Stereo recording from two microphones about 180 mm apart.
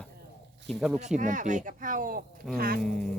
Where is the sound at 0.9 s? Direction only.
40° right (ahead or behind).